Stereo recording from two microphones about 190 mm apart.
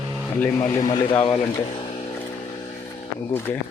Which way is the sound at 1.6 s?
30° left (ahead or behind).